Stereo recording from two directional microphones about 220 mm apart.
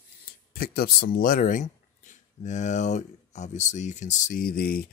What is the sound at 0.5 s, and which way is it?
Speech, 40° left (ahead or behind).